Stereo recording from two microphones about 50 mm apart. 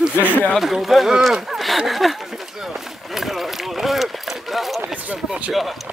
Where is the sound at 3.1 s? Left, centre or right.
Centre.